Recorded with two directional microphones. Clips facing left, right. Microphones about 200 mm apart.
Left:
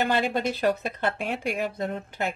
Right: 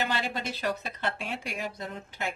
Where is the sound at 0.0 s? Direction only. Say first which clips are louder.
Left 7 dB; 55° left (ahead or behind).